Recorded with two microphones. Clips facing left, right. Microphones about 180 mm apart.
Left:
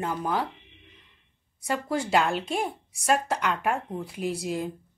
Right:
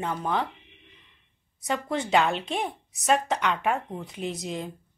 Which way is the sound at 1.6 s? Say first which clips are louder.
Even; 5° left (ahead or behind).